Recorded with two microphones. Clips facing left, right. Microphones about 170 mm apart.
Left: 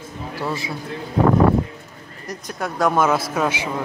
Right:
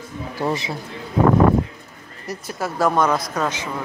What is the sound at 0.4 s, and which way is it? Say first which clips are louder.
Speech: right 3 dB; 20° right (ahead or behind).